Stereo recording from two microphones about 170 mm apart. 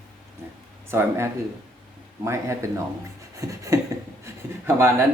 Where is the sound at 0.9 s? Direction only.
15° right (ahead or behind).